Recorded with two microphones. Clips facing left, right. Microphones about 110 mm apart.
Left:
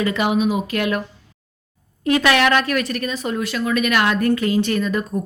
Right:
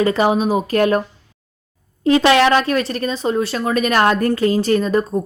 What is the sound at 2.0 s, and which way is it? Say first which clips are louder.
A woman's voice: right 4 dB; 30° right (ahead or behind).